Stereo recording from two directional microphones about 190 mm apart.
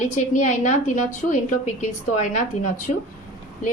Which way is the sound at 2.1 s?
40° left (ahead or behind).